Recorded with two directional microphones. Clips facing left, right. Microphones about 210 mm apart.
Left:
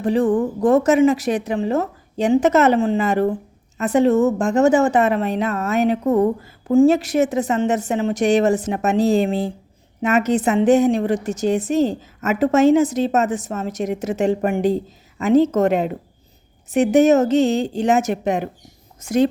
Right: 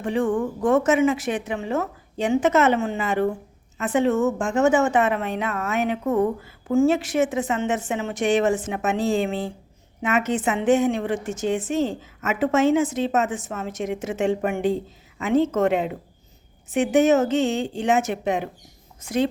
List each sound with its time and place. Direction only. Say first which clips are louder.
0.0 s a woman's voice: left 5 dB; 35° left (ahead or behind)